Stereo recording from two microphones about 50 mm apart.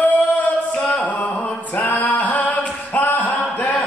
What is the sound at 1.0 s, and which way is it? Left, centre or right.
A capella, left.